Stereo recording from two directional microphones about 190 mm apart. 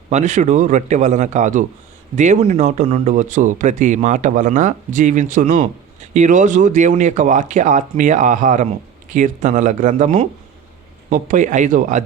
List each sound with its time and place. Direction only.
0.1 s speech: 40° right (ahead or behind)